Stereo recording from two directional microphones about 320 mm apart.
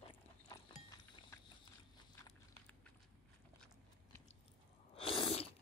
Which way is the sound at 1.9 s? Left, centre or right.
Centre.